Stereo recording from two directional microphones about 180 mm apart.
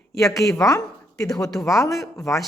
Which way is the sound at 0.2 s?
15° left (ahead or behind).